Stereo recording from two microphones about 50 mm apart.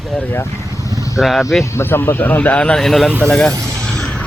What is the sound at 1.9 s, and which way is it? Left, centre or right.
Speech, left.